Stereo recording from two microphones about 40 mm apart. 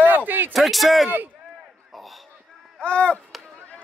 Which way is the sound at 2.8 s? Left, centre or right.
Left.